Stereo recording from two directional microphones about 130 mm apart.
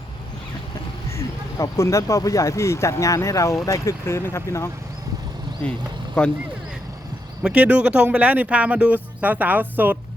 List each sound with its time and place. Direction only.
1.1 s speech: 25° left (ahead or behind)
6.2 s speech: 5° left (ahead or behind)
7.4 s speech: 10° right (ahead or behind)